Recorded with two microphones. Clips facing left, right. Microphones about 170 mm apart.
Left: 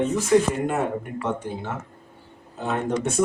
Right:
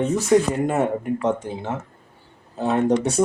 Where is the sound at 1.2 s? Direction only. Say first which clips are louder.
Right 4 dB; 20° right (ahead or behind).